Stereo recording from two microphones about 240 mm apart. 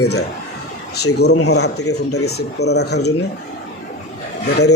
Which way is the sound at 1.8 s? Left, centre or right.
Left.